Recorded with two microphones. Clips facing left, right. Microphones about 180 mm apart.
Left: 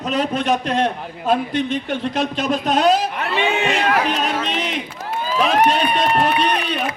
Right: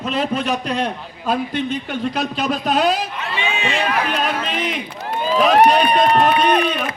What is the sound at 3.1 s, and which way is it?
Speech, 60° left (ahead or behind).